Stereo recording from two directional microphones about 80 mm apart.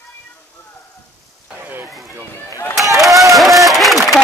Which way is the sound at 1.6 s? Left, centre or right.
Right.